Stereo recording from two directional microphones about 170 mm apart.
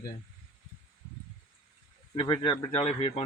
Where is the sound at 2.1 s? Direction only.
25° left (ahead or behind).